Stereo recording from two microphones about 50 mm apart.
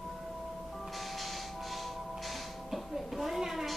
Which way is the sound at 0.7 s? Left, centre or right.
Centre.